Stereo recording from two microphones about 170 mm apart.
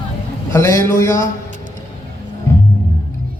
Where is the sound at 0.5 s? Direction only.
15° left (ahead or behind).